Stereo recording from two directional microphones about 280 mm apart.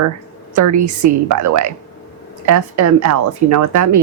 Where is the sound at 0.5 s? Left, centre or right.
Right.